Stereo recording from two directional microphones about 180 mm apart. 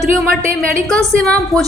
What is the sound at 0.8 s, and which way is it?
Speech, 5° left (ahead or behind).